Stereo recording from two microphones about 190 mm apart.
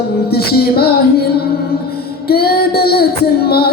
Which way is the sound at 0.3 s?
55° left (ahead or behind).